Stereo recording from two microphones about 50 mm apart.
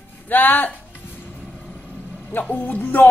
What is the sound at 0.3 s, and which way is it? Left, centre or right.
Speech, left.